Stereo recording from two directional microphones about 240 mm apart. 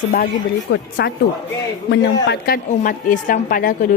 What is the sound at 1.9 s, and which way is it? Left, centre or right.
A woman's voice, left.